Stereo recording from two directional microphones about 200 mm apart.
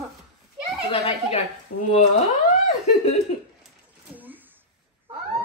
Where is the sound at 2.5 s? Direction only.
30° left (ahead or behind).